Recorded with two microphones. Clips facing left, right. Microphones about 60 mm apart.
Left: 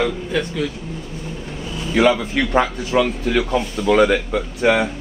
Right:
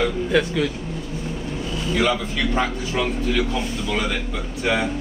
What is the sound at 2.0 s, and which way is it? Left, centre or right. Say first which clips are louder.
A man's voice: left 7 dB; left.